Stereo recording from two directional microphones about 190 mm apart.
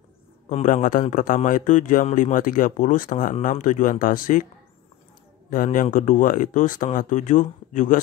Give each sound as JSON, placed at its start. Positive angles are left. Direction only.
{"t": 0.5, "sound": "a man's voice", "side_deg": 40}
{"t": 5.5, "sound": "a man's voice", "side_deg": 45}